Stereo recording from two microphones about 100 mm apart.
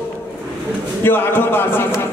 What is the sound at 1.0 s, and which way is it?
Speech, 20° left (ahead or behind).